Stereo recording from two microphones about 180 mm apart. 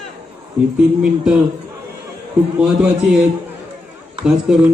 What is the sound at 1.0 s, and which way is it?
Speech, 5° right (ahead or behind).